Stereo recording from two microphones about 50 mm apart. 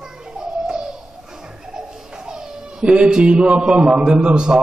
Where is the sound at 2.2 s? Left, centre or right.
Centre.